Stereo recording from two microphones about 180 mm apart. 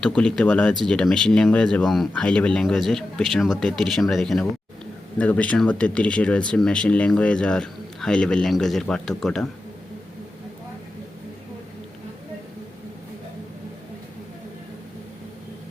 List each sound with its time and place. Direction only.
0.0 s speech: 5° left (ahead or behind)